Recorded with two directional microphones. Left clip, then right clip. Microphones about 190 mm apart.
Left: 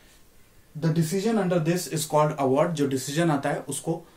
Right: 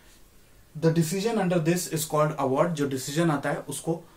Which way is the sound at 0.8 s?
5° left (ahead or behind).